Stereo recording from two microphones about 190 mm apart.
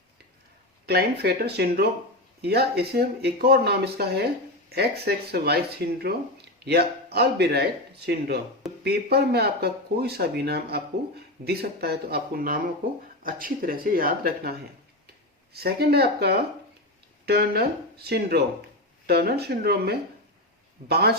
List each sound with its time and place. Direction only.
0.9 s speech: 55° right (ahead or behind)
15.5 s speech: 55° right (ahead or behind)